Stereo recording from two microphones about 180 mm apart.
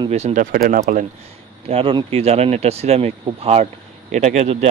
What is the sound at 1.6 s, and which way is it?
Speech, 30° right (ahead or behind).